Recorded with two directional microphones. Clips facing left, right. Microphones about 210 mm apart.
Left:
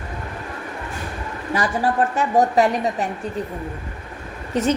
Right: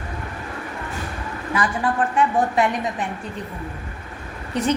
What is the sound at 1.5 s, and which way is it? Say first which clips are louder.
A woman's voice: left 2 dB; 40° left (ahead or behind).